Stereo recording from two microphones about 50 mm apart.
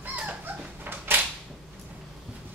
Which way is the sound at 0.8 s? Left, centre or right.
Right.